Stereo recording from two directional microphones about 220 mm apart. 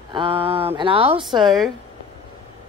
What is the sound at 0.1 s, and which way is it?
Speech, 25° right (ahead or behind).